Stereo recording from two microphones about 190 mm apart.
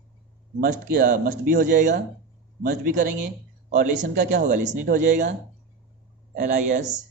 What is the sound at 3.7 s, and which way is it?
Speech, 50° right (ahead or behind).